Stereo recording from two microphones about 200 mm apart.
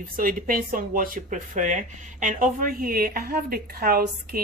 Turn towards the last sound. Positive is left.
turn(degrees=-45)  # may be behind; listen again after turning